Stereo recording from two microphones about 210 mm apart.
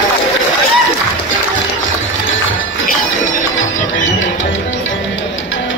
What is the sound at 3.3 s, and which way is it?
Music, 65° left (ahead or behind).